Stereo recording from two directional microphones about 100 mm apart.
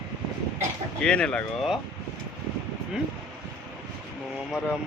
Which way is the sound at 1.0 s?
10° left (ahead or behind).